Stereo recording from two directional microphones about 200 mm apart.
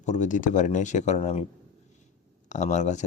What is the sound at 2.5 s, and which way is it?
Speech, 35° left (ahead or behind).